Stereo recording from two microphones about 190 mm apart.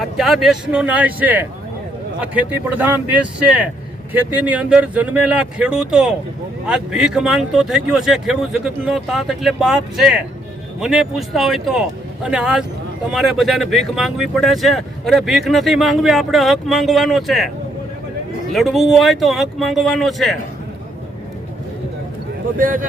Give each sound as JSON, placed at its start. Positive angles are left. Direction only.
{"t": 0.0, "sound": "speech", "side_deg": 0}
{"t": 18.5, "sound": "speech", "side_deg": 0}
{"t": 22.5, "sound": "speech", "side_deg": -45}